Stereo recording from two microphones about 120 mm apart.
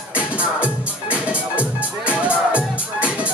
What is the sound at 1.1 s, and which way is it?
Music, 10° right (ahead or behind).